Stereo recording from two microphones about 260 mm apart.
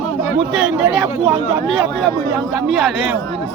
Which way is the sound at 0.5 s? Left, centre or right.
Centre.